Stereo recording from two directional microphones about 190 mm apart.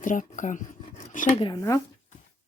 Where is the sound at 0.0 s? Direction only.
45° left (ahead or behind).